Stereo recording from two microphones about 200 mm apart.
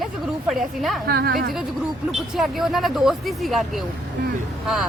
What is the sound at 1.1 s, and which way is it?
Speech, 50° right (ahead or behind).